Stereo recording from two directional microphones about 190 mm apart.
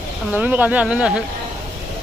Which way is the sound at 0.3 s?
10° right (ahead or behind).